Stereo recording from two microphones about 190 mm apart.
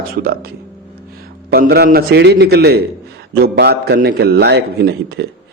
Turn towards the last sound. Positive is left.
turn(degrees=-60)  # may be behind; listen again after turning